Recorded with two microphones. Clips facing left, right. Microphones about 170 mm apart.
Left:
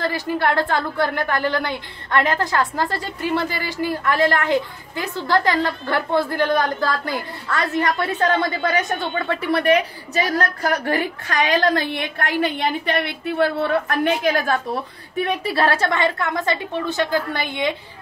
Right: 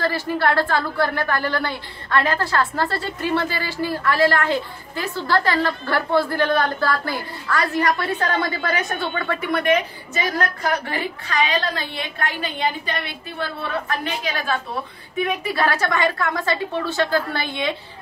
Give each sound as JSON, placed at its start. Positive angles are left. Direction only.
{"t": 0.0, "sound": "a woman's voice", "side_deg": 20}
{"t": 10.9, "sound": "a woman's voice", "side_deg": 50}
{"t": 15.1, "sound": "a woman's voice", "side_deg": 35}